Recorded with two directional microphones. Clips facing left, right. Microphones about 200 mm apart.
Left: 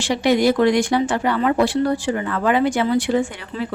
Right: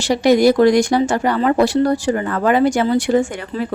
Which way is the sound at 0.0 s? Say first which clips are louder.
Right 4 dB; 40° right (ahead or behind).